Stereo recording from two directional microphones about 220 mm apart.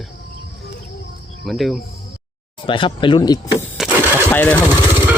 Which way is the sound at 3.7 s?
Centre (ahead or behind).